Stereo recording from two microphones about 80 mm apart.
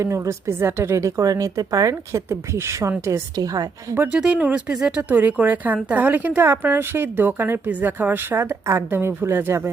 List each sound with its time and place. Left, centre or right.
0.0 s a woman's voice: right
4.1 s speech: centre; by 9.6 s right